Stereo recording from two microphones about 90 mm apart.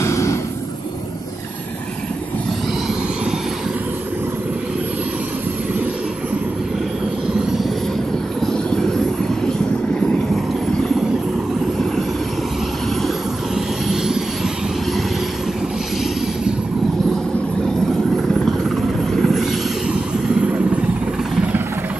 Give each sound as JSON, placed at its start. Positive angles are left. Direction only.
{"t": 0.0, "sound": "a sound", "side_deg": 30}
{"t": 8.4, "sound": "train", "side_deg": 5}
{"t": 9.5, "sound": "vehicle", "side_deg": 10}
{"t": 13.6, "sound": "vehicle", "side_deg": -5}
{"t": 19.1, "sound": "vehicle", "side_deg": 0}